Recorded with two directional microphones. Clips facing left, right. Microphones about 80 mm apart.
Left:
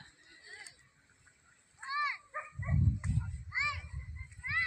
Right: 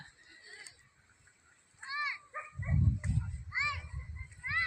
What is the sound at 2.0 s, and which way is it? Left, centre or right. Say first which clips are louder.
Dog: left 3 dB; left.